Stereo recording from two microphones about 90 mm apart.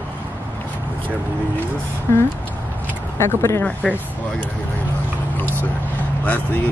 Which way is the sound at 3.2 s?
30° left (ahead or behind).